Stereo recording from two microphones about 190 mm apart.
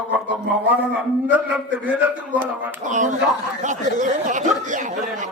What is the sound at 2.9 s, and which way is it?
Speech, 40° right (ahead or behind).